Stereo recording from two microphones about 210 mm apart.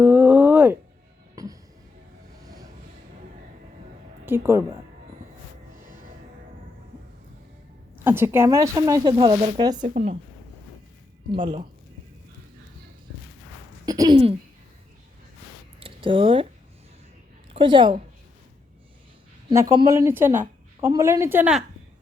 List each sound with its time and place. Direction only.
0.0 s a sound: 10° right (ahead or behind)
2.4 s vehicle: 15° right (ahead or behind)
4.3 s a woman's voice: 10° right (ahead or behind)
7.9 s a woman's voice: 10° right (ahead or behind)
9.9 s a woman's voice: 35° right (ahead or behind)
11.3 s speech: 25° right (ahead or behind)
13.8 s speech: 15° right (ahead or behind)
15.8 s speech: 25° right (ahead or behind)
17.5 s a woman's voice: 25° right (ahead or behind)
19.5 s a woman's voice: 20° right (ahead or behind)